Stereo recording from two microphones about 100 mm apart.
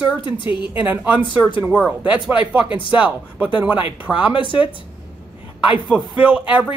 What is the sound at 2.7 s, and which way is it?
Speech, 55° left (ahead or behind).